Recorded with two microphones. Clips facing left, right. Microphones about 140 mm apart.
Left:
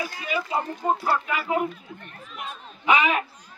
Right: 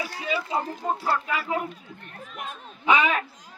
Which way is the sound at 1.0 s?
15° left (ahead or behind).